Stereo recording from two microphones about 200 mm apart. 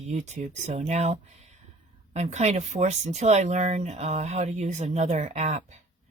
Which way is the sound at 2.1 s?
35° right (ahead or behind).